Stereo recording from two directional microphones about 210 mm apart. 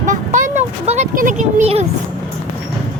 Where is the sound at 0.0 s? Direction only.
35° right (ahead or behind).